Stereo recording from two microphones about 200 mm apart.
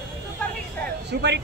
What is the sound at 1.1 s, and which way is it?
Speech, 55° right (ahead or behind).